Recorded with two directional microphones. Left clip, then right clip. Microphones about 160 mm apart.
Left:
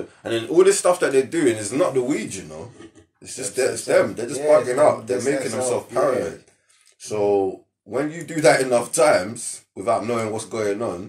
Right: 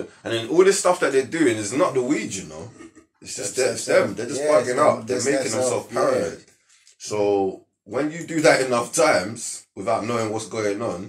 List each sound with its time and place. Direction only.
0.2 s speech: 35° left (ahead or behind)
4.4 s speech: centre (ahead or behind)
7.0 s speech: 35° left (ahead or behind)